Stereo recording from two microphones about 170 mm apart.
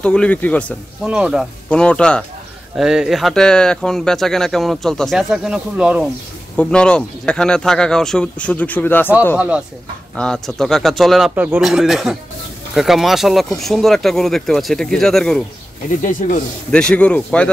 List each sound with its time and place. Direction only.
0.0 s a man's voice: 5° left (ahead or behind)
1.0 s speech: 5° right (ahead or behind)
1.7 s speech: 5° left (ahead or behind)
6.5 s speech: 5° left (ahead or behind)
10.1 s speech: 5° left (ahead or behind)
16.0 s speech: 50° left (ahead or behind)
16.7 s a man's voice: 5° left (ahead or behind)